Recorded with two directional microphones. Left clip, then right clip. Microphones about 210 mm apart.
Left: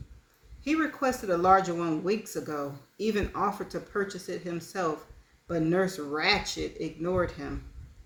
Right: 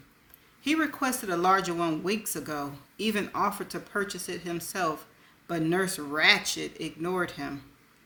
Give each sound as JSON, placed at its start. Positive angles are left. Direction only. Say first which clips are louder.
{"t": 0.6, "sound": "speech", "louder": "even", "side_deg": -35}